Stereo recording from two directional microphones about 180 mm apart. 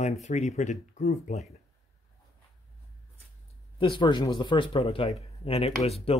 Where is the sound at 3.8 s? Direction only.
25° left (ahead or behind).